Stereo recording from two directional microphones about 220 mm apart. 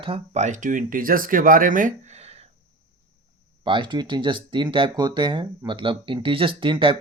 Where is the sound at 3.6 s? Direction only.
20° right (ahead or behind).